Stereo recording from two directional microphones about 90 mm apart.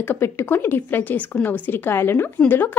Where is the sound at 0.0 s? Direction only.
25° left (ahead or behind).